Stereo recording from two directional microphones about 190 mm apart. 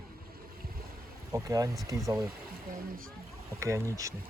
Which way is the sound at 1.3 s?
15° right (ahead or behind).